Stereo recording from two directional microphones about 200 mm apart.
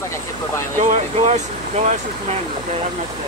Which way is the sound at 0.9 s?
35° right (ahead or behind).